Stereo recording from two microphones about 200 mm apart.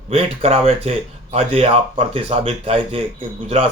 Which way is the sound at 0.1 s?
30° right (ahead or behind).